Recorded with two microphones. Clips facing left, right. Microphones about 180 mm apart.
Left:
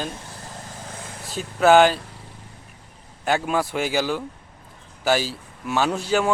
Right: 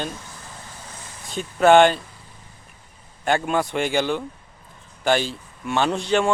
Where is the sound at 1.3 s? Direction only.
5° left (ahead or behind).